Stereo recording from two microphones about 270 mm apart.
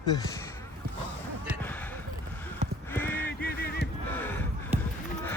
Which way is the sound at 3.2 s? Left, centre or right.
Left.